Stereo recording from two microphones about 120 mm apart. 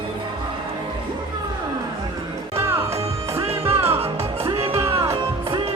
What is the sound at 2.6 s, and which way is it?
Music, 20° right (ahead or behind).